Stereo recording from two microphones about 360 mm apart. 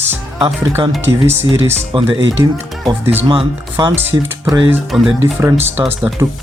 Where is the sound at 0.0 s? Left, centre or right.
Centre.